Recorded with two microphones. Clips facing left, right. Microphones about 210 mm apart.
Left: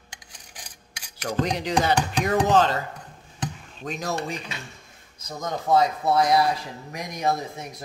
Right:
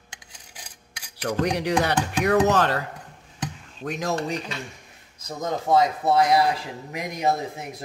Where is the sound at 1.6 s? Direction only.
70° right (ahead or behind).